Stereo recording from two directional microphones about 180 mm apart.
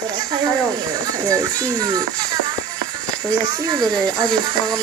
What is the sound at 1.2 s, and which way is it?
Speech, 20° right (ahead or behind).